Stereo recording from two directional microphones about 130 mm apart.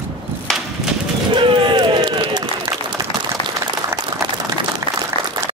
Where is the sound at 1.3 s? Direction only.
40° right (ahead or behind).